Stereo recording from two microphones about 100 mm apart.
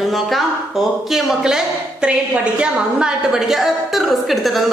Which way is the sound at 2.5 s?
10° right (ahead or behind).